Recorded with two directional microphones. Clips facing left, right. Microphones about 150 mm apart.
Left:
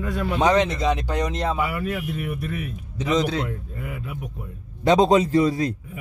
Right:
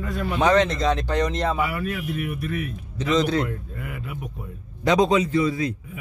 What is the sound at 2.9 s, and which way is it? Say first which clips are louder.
Speech: right 1 dB; 10° left (ahead or behind).